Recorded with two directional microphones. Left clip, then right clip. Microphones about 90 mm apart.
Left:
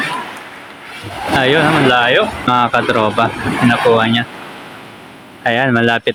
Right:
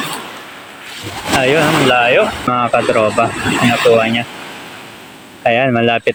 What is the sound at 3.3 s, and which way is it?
Speech, 35° right (ahead or behind).